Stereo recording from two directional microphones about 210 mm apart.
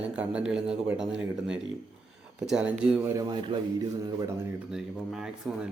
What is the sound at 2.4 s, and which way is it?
Speech, 5° right (ahead or behind).